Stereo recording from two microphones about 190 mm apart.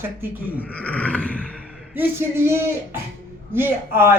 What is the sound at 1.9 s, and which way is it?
Speech, 10° right (ahead or behind).